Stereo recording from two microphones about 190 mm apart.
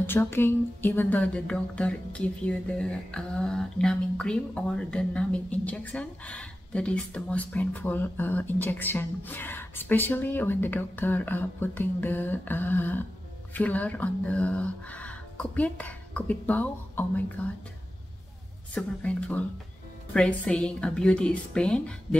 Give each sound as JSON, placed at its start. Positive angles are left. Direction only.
{"t": 0.0, "sound": "speech", "side_deg": 10}
{"t": 18.8, "sound": "a woman's voice", "side_deg": 5}